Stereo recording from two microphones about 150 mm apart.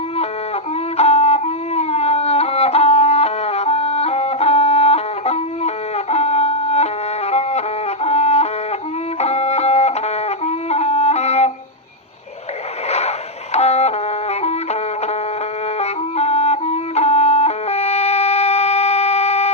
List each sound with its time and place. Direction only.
0.9 s music: 45° left (ahead or behind)
9.2 s wind instrument: 45° left (ahead or behind)
12.9 s music: 45° left (ahead or behind)